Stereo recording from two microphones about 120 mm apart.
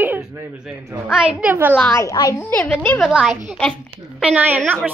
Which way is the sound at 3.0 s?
5° right (ahead or behind).